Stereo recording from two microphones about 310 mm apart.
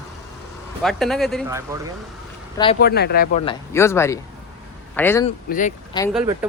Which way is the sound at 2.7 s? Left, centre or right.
Left.